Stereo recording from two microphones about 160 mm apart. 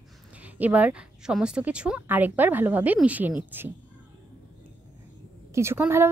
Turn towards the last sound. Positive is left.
turn(degrees=-15)  # may be behind; listen again after turning